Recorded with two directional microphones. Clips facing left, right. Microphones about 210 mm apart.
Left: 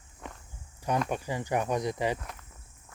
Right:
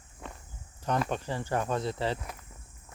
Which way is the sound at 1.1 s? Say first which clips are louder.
Left 1 dB; 10° left (ahead or behind).